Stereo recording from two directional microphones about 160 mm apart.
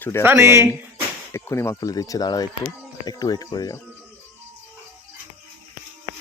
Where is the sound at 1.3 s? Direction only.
15° left (ahead or behind).